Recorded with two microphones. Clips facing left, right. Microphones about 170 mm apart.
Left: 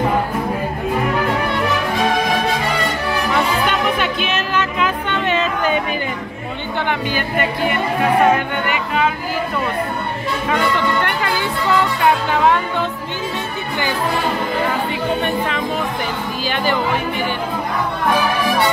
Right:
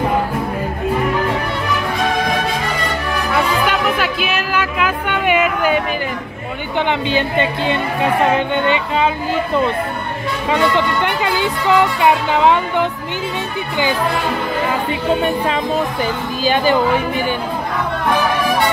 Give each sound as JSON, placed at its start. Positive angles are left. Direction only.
{"t": 3.3, "sound": "music", "side_deg": -5}
{"t": 6.9, "sound": "speech", "side_deg": -25}
{"t": 11.0, "sound": "speech", "side_deg": -15}